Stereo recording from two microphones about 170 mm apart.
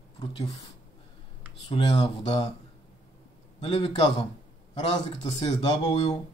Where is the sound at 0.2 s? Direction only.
20° left (ahead or behind).